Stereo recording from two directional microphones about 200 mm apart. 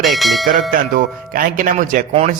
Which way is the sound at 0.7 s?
45° right (ahead or behind).